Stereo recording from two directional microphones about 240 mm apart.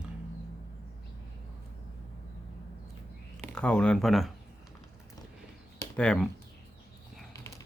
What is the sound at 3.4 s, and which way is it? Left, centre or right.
Speech, centre.